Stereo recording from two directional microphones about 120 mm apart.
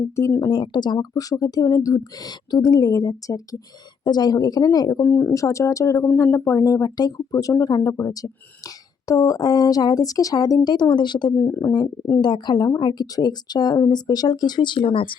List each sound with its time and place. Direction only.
0.2 s speech: 20° left (ahead or behind)
0.4 s speech: 40° left (ahead or behind)
5.0 s speech: 15° left (ahead or behind)
5.3 s speech: 25° left (ahead or behind)
11.3 s speech: 25° left (ahead or behind)
12.2 s speech: 40° left (ahead or behind)